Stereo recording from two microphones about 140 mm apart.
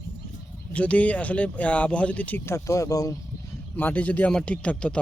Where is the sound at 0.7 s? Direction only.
10° left (ahead or behind); by 3.2 s 25° left (ahead or behind).